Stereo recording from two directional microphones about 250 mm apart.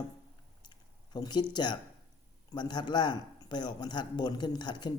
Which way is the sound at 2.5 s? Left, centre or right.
Centre.